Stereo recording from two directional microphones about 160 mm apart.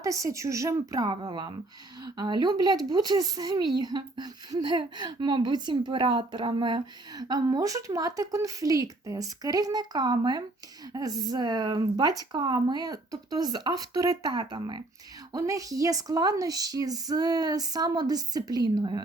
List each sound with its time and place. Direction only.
0.0 s speech: 20° right (ahead or behind)